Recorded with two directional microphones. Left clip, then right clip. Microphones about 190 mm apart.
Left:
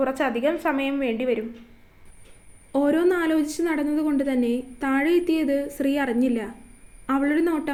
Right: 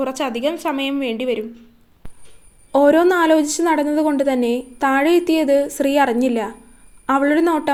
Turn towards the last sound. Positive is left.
turn(degrees=-10)  # may be behind; listen again after turning